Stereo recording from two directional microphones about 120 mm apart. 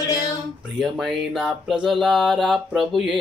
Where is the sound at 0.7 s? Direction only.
Centre (ahead or behind).